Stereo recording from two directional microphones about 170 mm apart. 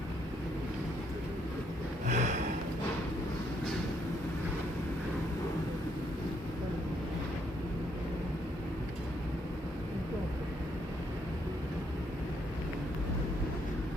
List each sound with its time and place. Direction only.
2.0 s snort: 45° right (ahead or behind)